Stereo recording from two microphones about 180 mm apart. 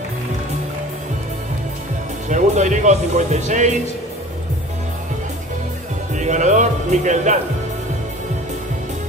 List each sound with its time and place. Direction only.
2.2 s speech: 40° right (ahead or behind)
6.1 s speech: 40° right (ahead or behind)